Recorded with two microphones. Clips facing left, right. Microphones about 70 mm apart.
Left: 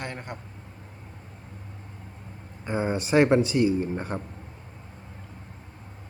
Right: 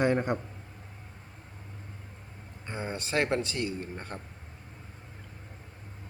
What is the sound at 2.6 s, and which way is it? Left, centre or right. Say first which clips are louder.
Speech: left 9 dB; centre.